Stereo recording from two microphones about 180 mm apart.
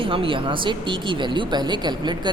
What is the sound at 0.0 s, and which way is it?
A woman's voice, 30° right (ahead or behind).